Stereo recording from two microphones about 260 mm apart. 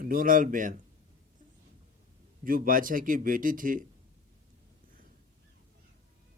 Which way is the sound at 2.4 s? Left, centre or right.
Right.